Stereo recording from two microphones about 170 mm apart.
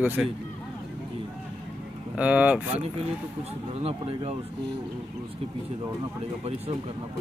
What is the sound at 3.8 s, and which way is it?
Speech, 35° right (ahead or behind).